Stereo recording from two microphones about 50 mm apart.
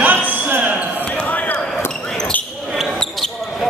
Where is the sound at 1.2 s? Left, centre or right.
Left.